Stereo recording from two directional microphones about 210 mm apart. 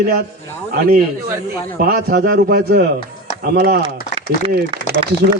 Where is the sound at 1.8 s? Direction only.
45° right (ahead or behind).